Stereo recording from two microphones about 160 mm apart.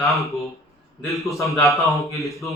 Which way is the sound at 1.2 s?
20° left (ahead or behind).